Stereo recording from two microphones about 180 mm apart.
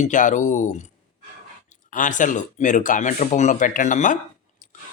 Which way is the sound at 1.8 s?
45° left (ahead or behind).